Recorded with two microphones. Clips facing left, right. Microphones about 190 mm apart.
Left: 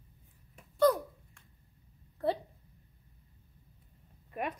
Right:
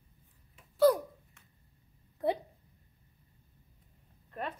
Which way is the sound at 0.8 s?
5° right (ahead or behind).